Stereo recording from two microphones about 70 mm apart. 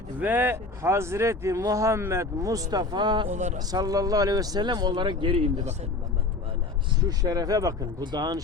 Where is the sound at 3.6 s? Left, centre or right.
Right.